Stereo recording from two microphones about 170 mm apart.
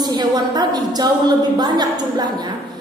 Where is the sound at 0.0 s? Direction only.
25° right (ahead or behind).